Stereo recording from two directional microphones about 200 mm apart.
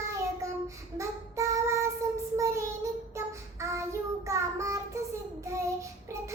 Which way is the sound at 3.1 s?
15° right (ahead or behind).